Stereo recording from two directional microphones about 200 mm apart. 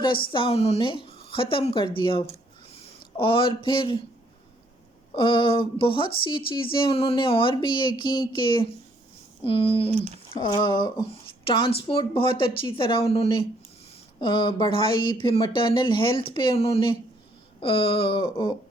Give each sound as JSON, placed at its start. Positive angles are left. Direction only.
{"t": 0.3, "sound": "speech", "side_deg": 25}
{"t": 5.1, "sound": "speech", "side_deg": 25}